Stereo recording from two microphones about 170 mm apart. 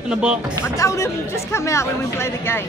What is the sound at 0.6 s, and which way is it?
Speech, 15° left (ahead or behind).